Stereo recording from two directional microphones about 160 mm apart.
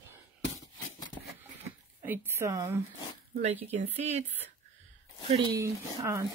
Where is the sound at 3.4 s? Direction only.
40° right (ahead or behind).